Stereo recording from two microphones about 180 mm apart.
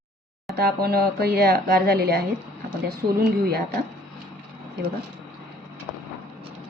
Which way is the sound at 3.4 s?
60° right (ahead or behind).